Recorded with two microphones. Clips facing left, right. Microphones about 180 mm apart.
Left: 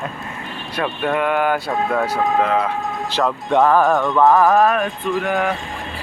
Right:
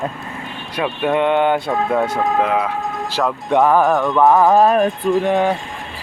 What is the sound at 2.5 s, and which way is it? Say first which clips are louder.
Speech: even; 5° right (ahead or behind).